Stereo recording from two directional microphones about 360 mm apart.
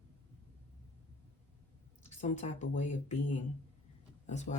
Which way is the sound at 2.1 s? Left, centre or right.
Centre.